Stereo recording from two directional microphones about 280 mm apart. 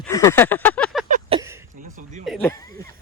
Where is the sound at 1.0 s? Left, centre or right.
Right.